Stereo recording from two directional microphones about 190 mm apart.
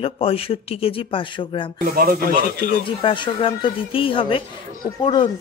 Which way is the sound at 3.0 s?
25° left (ahead or behind).